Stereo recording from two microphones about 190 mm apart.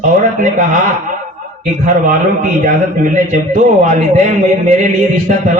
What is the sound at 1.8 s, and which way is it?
A man's voice, 45° right (ahead or behind).